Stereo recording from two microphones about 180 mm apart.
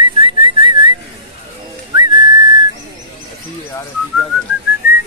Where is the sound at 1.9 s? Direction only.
25° right (ahead or behind).